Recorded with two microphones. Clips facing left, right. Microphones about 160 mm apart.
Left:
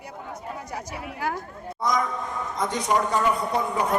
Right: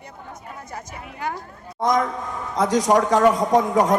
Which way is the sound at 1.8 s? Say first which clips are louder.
Right 5 dB; 55° right (ahead or behind).